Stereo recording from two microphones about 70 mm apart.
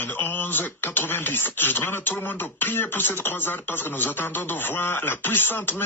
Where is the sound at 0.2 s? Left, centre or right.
Left.